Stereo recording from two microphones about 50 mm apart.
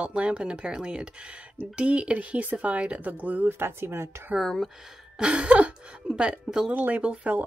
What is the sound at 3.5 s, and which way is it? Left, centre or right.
Speech, right.